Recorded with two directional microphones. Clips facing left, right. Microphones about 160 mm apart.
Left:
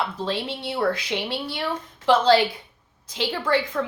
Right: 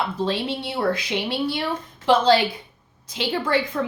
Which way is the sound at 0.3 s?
20° right (ahead or behind).